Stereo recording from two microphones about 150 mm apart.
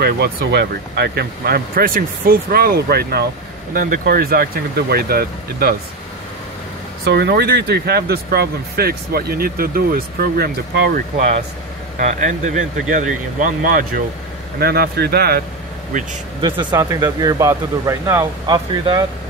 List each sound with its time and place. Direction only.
0.0 s speech: 90° right
3.7 s speech: 70° right (ahead or behind); by 5.8 s 90° right
7.1 s speech: 90° right
12.0 s speech: 55° right (ahead or behind)
14.6 s speech: 90° right
16.3 s speech: 30° right (ahead or behind)